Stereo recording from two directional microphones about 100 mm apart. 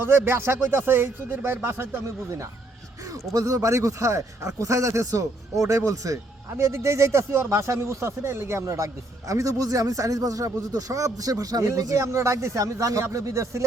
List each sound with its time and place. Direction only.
0.0 s speech: 25° right (ahead or behind)